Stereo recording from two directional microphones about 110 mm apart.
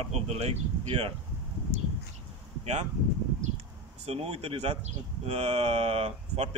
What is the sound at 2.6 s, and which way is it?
Speech, 90° right.